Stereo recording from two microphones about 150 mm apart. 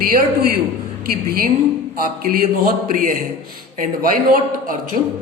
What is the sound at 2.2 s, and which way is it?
Speech, 70° right (ahead or behind).